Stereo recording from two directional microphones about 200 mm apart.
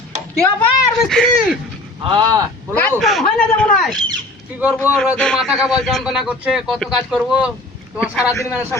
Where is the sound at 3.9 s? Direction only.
20° right (ahead or behind).